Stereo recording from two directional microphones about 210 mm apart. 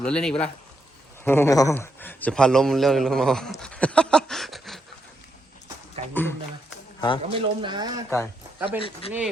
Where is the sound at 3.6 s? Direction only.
5° left (ahead or behind).